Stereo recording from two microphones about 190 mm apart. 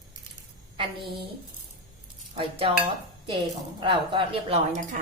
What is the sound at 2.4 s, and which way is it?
Speech, 30° right (ahead or behind).